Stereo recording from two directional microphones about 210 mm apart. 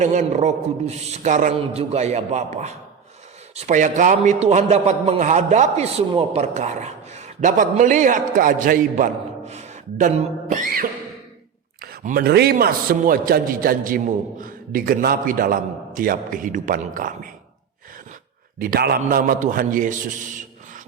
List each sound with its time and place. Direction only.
0.0 s a man's voice: 35° right (ahead or behind)
9.5 s a sound: 30° right (ahead or behind)
11.8 s a man's voice: 45° right (ahead or behind)
18.6 s a man's voice: 45° right (ahead or behind)